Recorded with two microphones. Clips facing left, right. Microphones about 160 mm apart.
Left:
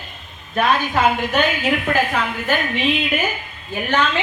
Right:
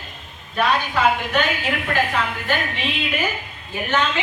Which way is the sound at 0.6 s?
50° left (ahead or behind).